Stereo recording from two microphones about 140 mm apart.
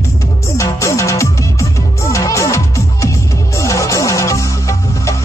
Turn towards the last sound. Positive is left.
turn(degrees=20)  # may be behind; listen again after turning